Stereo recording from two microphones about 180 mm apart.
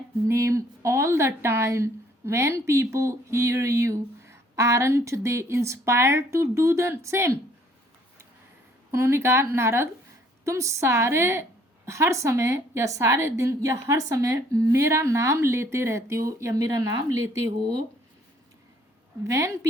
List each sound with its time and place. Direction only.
0.3 s speech: 15° right (ahead or behind)
8.9 s speech: 15° right (ahead or behind)
19.2 s speech: 15° right (ahead or behind)